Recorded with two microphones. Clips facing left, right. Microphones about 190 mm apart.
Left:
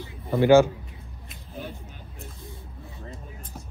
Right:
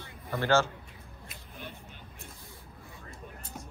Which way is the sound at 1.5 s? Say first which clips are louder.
Left 9 dB; 40° left (ahead or behind).